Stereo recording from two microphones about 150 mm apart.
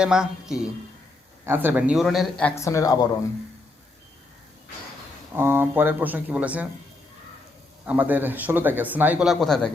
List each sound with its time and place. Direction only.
0.0 s a man's voice: 5° right (ahead or behind)
2.6 s speech: 20° left (ahead or behind)
5.3 s speech: 15° right (ahead or behind)
7.9 s speech: 10° right (ahead or behind)